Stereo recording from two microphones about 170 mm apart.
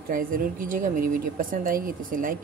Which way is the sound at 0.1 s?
55° right (ahead or behind).